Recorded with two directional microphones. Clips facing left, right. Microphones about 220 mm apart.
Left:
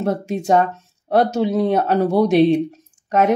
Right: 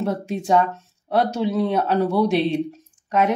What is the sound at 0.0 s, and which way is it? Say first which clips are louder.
Speech: left 3 dB; 45° left (ahead or behind).